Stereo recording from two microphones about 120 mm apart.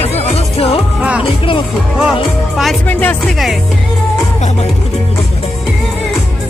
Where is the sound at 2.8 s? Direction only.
15° left (ahead or behind).